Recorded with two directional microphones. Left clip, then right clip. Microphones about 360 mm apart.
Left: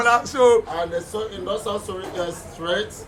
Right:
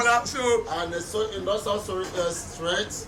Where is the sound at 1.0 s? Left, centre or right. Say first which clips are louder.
Left 5 dB; left.